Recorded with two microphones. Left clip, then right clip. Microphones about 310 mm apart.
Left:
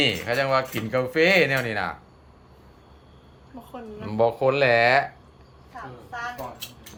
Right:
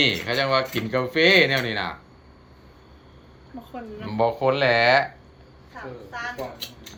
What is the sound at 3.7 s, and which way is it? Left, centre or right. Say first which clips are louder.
Speech: even; left.